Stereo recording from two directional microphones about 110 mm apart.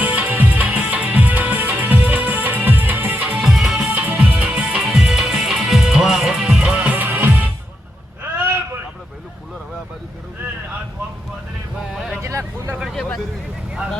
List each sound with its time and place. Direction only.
0.0 s music: 15° right (ahead or behind)
3.4 s music: centre (ahead or behind)
3.8 s music: 15° right (ahead or behind)
11.9 s vehicle: centre (ahead or behind)
12.2 s vehicle: 25° right (ahead or behind)
12.9 s vehicle: 5° left (ahead or behind)